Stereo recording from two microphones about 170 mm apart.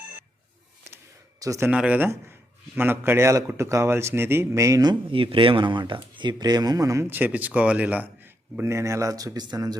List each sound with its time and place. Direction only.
1.4 s speech: 20° right (ahead or behind)